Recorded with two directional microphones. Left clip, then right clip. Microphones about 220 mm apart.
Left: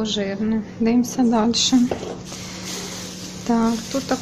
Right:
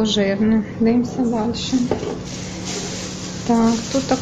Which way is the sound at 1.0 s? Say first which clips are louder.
Left 2 dB; 35° left (ahead or behind).